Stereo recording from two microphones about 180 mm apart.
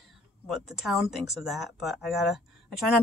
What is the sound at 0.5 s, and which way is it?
Speech, centre (ahead or behind).